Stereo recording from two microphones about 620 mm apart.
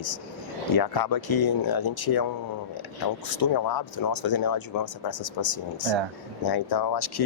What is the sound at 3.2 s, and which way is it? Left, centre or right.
Speech, left.